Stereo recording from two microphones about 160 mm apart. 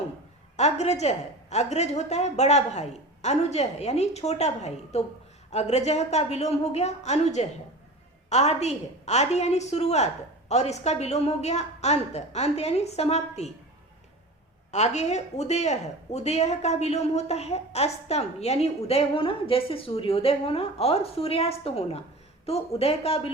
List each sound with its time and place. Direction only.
0.5 s a woman's voice: 45° left (ahead or behind)
14.7 s speech: 45° left (ahead or behind)